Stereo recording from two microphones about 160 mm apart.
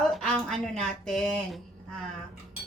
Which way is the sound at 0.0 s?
5° left (ahead or behind).